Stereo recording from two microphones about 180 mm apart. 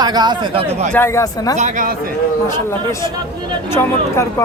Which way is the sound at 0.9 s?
15° left (ahead or behind).